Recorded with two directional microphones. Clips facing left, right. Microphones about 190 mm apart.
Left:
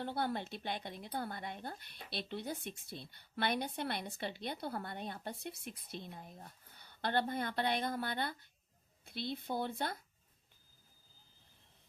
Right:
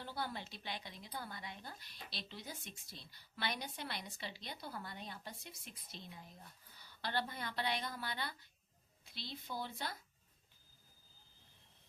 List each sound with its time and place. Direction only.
0.0 s a woman's voice: 60° left (ahead or behind)